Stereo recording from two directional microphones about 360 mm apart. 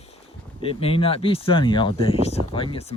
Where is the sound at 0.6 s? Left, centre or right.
Centre.